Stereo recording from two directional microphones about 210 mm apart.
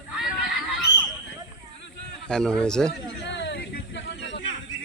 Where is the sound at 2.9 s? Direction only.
55° left (ahead or behind).